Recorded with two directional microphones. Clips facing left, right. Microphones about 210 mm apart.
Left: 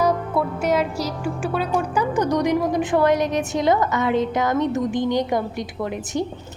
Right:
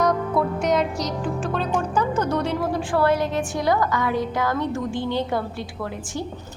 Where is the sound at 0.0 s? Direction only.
5° left (ahead or behind).